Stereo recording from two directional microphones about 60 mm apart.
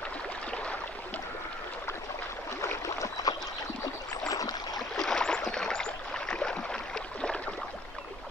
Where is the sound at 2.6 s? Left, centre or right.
Left.